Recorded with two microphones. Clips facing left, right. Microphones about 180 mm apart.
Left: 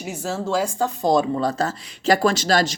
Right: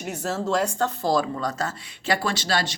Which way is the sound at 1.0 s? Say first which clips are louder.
Left 6 dB; 20° left (ahead or behind).